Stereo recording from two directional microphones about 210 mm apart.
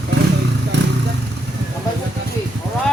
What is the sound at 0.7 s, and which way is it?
Vehicle, 55° right (ahead or behind).